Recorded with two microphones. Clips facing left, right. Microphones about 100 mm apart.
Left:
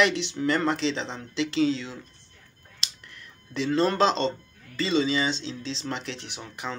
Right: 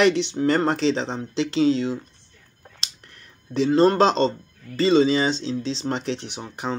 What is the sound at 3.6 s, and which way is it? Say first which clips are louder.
Speech: right 5 dB; 30° right (ahead or behind).